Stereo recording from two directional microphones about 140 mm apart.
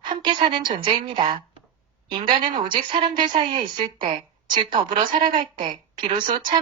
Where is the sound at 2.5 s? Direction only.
35° right (ahead or behind).